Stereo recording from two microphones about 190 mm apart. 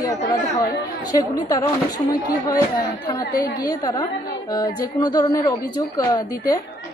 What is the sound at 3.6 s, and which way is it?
A woman's voice, 20° left (ahead or behind).